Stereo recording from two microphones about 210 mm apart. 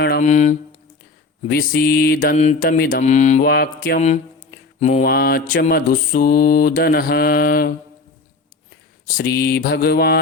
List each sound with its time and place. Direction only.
0.2 s mantra: 35° left (ahead or behind)
1.5 s mantra: 45° left (ahead or behind)
3.0 s mantra: 35° left (ahead or behind)
3.4 s mantra: 45° left (ahead or behind)
5.0 s mantra: 45° left (ahead or behind)
9.0 s mantra: 45° left (ahead or behind)